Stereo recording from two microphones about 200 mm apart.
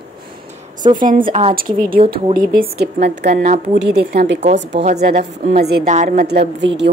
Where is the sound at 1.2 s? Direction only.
30° right (ahead or behind).